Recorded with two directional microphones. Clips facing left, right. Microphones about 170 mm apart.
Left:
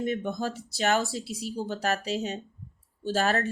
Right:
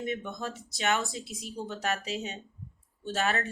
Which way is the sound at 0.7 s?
35° left (ahead or behind).